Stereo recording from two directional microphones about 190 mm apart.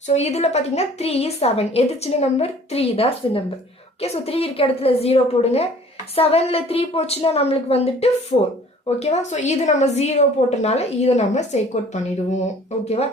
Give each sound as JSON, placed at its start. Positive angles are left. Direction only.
{"t": 0.1, "sound": "a woman's voice", "side_deg": 35}
{"t": 12.8, "sound": "a woman's voice", "side_deg": 35}